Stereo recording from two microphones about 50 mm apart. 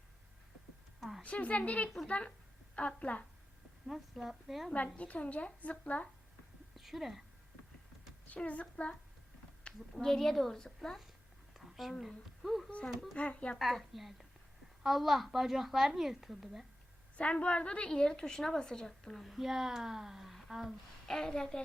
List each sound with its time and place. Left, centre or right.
1.2 s a woman's voice: left
3.8 s a woman's voice: centre
4.7 s a woman's voice: left
6.7 s speech: centre
8.3 s a woman's voice: left
9.9 s a woman's voice: centre
13.1 s a woman's voice: left
13.6 s a woman's voice: centre
17.2 s a woman's voice: left
19.2 s speech: centre
21.1 s a woman's voice: centre